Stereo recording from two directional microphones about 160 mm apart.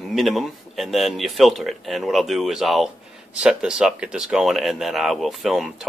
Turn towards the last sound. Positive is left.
turn(degrees=0)  # may be behind; listen again after turning